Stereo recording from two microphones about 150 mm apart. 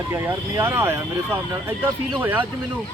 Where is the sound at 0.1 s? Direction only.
15° right (ahead or behind).